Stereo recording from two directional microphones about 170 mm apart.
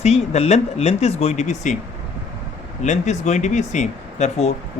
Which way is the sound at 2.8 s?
45° left (ahead or behind).